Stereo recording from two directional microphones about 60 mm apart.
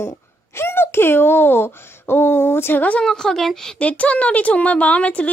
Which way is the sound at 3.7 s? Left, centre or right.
Left.